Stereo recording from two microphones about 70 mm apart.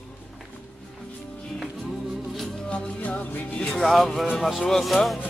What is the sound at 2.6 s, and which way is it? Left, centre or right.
Music, centre.